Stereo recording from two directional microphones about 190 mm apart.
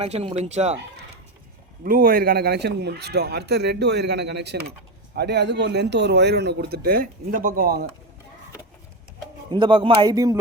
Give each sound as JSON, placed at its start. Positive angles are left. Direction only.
{"t": 0.0, "sound": "speech", "side_deg": -35}
{"t": 1.8, "sound": "a man's voice", "side_deg": -50}
{"t": 9.5, "sound": "a man's voice", "side_deg": -25}